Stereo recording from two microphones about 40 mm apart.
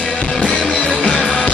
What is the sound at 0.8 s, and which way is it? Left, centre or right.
Music, centre.